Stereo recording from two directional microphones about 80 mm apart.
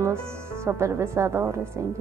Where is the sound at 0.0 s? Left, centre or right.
Right.